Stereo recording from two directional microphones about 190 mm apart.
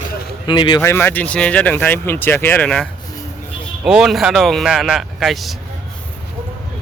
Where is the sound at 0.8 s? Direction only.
10° left (ahead or behind).